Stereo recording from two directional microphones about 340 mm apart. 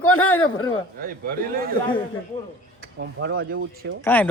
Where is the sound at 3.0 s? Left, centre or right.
Right.